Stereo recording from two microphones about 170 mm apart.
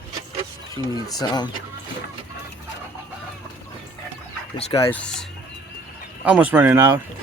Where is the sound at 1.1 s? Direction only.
25° left (ahead or behind).